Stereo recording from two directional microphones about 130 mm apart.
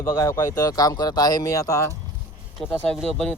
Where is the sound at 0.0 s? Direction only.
25° left (ahead or behind).